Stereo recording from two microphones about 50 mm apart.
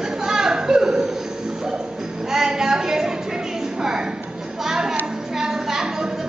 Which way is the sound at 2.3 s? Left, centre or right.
Centre.